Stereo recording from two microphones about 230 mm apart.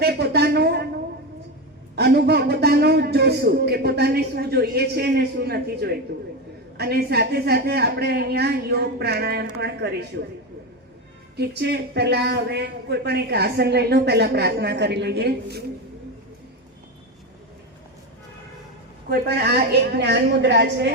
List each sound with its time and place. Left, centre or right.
0.0 s a sound: right
2.0 s a man's voice: right
11.3 s a man's voice: right
20.0 s a man's voice: right